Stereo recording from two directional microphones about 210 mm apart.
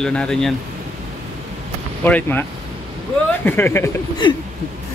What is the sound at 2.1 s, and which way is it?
Speech, 10° left (ahead or behind).